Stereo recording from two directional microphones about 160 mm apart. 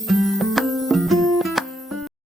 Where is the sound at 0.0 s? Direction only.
Centre (ahead or behind).